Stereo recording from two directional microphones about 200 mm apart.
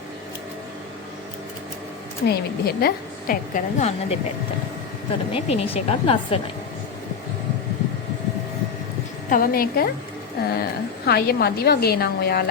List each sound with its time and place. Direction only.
2.2 s a woman's voice: 50° left (ahead or behind); by 4.2 s 35° left (ahead or behind)
5.3 s speech: 30° left (ahead or behind)
9.3 s a woman's voice: 45° left (ahead or behind)